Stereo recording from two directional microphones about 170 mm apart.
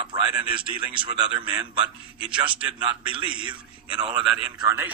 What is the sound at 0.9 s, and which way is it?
Speech, 30° right (ahead or behind).